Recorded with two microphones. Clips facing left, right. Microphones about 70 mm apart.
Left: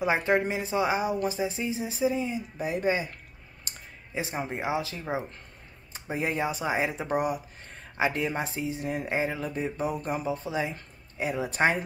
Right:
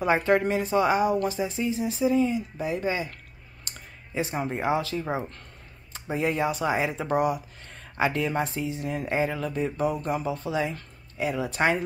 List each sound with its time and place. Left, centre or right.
0.0 s speech: centre
4.4 s speech: centre
5.9 s speech: left
8.0 s speech: left